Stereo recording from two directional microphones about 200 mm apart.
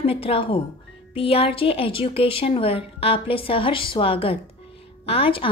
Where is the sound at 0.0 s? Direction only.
30° left (ahead or behind).